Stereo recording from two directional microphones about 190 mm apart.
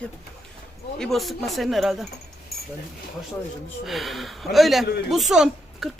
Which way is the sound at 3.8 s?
Centre (ahead or behind).